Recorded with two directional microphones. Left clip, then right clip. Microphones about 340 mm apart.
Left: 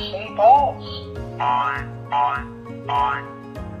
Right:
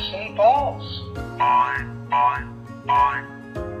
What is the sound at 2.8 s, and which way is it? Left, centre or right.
Speech, centre.